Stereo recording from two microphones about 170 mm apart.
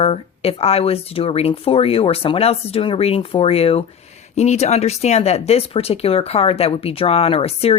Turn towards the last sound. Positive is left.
turn(degrees=35)  # may be behind; listen again after turning